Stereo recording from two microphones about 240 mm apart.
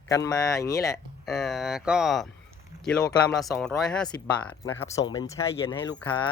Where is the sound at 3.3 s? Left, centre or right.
Centre.